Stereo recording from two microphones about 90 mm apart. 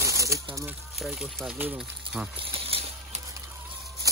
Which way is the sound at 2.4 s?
90° right.